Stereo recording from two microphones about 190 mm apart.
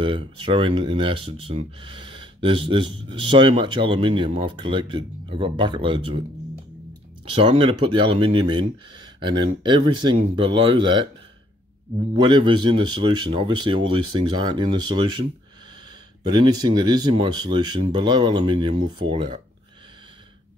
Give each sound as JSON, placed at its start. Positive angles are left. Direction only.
{"t": 0.0, "sound": "speech", "side_deg": -25}
{"t": 7.2, "sound": "speech", "side_deg": -30}
{"t": 12.2, "sound": "speech", "side_deg": -25}
{"t": 16.3, "sound": "speech", "side_deg": -20}